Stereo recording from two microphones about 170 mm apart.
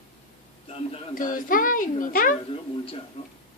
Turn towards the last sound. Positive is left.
turn(degrees=35)  # may be behind; listen again after turning